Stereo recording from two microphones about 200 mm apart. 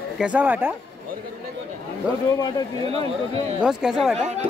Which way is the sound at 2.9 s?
30° right (ahead or behind).